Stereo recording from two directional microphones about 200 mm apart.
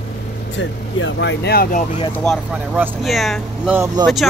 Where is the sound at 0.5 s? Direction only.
65° left (ahead or behind); by 2.0 s 40° left (ahead or behind).